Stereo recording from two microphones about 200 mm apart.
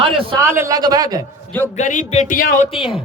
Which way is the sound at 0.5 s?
15° right (ahead or behind).